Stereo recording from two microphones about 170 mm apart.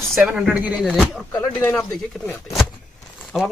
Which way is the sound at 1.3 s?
15° left (ahead or behind).